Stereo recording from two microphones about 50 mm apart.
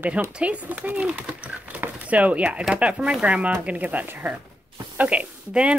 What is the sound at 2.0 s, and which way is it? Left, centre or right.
Speech, right.